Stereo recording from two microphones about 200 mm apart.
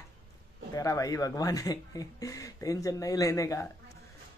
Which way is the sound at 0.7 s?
15° left (ahead or behind).